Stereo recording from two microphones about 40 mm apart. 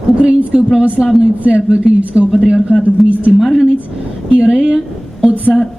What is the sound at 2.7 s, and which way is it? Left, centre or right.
Speech, left.